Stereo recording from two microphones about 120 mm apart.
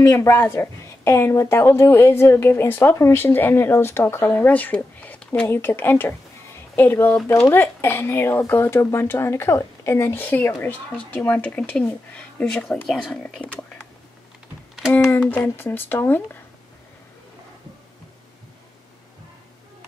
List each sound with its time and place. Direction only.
0.0 s a woman's voice: 25° left (ahead or behind); by 13.5 s 10° left (ahead or behind)
14.9 s speech: 15° left (ahead or behind)